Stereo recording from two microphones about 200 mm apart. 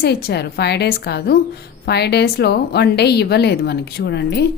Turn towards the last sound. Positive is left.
turn(degrees=55)  # may be behind; listen again after turning